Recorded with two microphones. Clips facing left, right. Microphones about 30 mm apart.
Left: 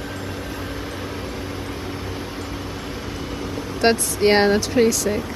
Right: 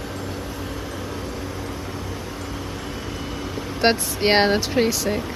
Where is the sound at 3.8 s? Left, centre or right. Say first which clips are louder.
Left 2 dB; centre.